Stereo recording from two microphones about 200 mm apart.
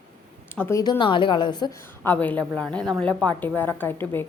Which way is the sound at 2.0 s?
10° left (ahead or behind).